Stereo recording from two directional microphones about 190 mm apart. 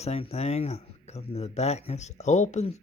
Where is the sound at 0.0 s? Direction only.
35° left (ahead or behind).